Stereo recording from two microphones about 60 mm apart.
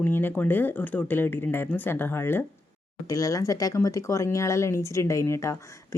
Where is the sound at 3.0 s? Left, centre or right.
Left.